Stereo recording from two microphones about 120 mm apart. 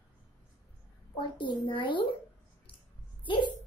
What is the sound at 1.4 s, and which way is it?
Speech, 40° left (ahead or behind).